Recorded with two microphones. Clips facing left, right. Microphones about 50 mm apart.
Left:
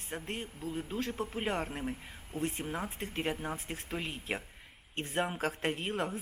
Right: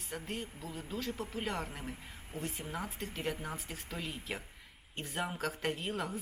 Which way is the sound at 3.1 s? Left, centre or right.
Left.